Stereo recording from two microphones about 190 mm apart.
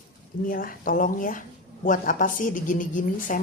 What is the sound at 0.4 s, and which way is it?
Speech, 50° left (ahead or behind).